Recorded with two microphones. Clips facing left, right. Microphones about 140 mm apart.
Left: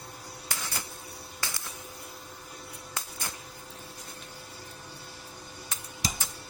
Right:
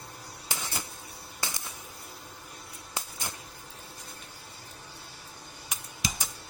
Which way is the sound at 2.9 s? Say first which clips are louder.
Right 2 dB; 15° right (ahead or behind).